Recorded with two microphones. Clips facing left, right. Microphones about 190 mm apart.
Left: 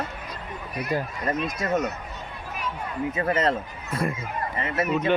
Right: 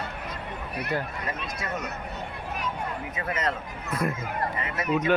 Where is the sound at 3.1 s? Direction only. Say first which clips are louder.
Left 7 dB; 30° left (ahead or behind).